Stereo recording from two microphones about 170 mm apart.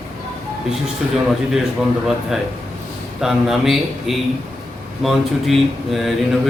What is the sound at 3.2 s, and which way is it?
Speech, centre (ahead or behind).